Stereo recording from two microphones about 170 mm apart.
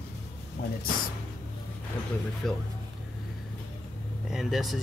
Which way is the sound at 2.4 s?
Centre (ahead or behind).